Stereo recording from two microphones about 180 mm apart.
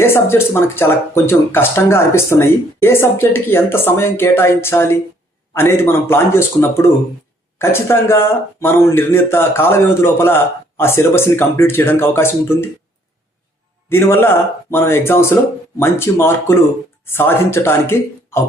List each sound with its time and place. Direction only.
0.0 s speech: 15° left (ahead or behind)
13.9 s speech: 15° left (ahead or behind)